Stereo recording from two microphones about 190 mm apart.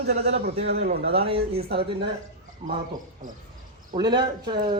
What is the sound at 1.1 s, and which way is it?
Speech, 30° right (ahead or behind).